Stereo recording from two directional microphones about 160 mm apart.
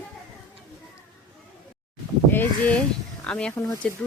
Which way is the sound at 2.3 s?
10° left (ahead or behind).